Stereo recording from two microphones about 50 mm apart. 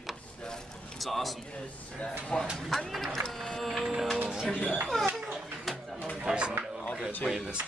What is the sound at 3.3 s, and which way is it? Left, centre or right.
Printer, centre.